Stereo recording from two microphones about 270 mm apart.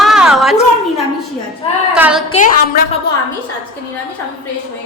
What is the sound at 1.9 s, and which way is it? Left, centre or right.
Speech, centre.